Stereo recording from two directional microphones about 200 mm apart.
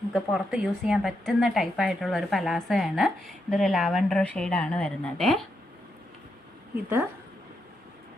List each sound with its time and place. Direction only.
0.1 s a woman's voice: 5° right (ahead or behind)